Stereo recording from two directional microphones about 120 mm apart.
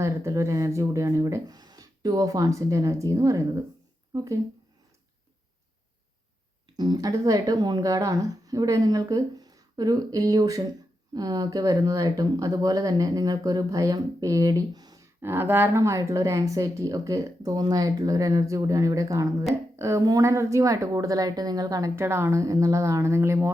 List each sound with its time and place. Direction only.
0.0 s speech: 25° right (ahead or behind)
6.7 s speech: 35° right (ahead or behind)
15.2 s speech: 20° right (ahead or behind)